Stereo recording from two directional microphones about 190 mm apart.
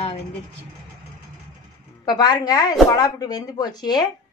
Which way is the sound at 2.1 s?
20° left (ahead or behind).